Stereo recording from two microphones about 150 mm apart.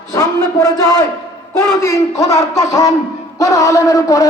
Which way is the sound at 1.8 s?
20° left (ahead or behind).